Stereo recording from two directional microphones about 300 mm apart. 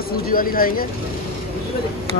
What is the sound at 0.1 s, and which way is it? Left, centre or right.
Speech, left.